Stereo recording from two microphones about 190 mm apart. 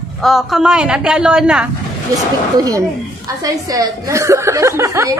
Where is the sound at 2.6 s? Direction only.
20° right (ahead or behind).